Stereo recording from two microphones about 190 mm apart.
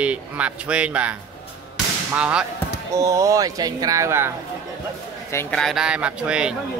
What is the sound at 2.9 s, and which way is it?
Speech, 15° right (ahead or behind).